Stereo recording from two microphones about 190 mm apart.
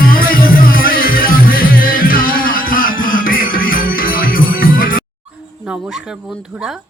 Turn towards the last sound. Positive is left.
turn(degrees=50)  # may be behind; listen again after turning